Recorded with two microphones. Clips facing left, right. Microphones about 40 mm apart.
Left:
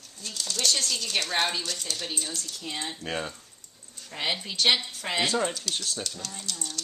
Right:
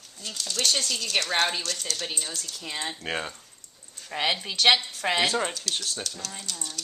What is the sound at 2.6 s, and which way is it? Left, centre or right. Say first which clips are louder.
Speech: right 2 dB; right.